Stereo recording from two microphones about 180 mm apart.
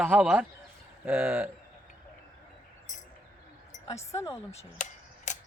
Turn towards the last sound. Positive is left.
turn(degrees=45)  # may be behind; listen again after turning